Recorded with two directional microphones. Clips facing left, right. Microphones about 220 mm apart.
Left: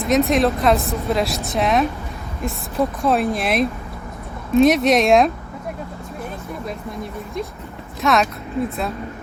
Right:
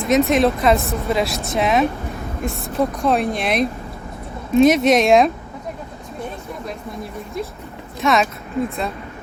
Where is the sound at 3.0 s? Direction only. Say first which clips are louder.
Even; centre (ahead or behind).